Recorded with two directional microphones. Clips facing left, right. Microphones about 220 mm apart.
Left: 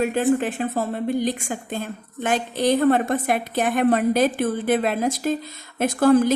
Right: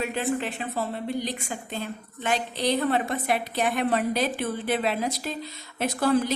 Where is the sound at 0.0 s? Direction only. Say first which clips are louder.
Left 7 dB; 45° left (ahead or behind).